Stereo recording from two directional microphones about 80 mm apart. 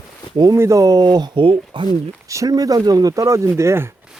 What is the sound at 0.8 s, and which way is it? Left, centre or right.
Speech, right.